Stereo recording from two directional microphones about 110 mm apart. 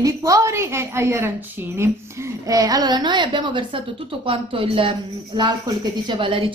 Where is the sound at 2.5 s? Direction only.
35° right (ahead or behind).